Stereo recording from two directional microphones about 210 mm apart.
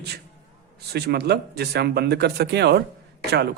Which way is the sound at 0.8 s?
50° right (ahead or behind).